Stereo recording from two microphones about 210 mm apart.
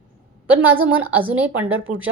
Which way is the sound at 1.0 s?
10° right (ahead or behind).